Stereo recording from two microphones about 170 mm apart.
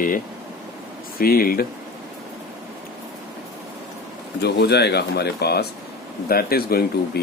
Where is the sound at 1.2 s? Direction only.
60° left (ahead or behind).